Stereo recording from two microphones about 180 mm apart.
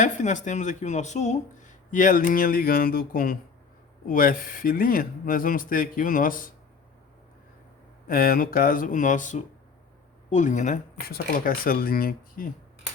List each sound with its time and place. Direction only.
0.0 s speech: 45° left (ahead or behind)
8.0 s speech: 50° left (ahead or behind)